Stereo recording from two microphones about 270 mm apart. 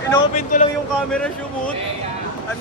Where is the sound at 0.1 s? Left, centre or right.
Left.